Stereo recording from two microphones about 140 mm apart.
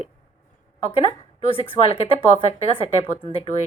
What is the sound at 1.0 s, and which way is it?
A woman's voice, 45° left (ahead or behind).